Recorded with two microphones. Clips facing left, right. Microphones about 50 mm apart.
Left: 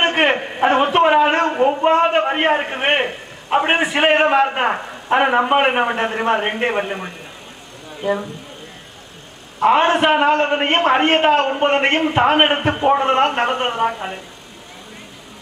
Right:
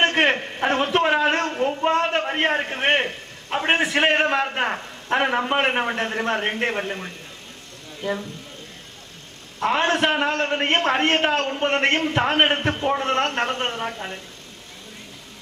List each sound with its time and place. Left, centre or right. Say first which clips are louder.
0.0 s a sound: left 3 dB; centre
8.0 s a man's voice: left 6 dB; centre
9.6 s a man's voice: left 6 dB; centre